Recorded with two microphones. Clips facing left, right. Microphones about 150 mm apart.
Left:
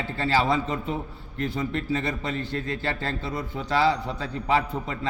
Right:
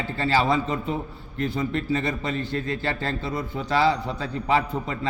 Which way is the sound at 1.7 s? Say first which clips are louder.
Right 2 dB; 90° right.